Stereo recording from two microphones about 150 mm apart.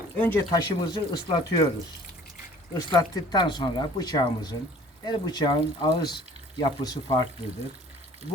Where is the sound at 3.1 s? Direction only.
30° left (ahead or behind).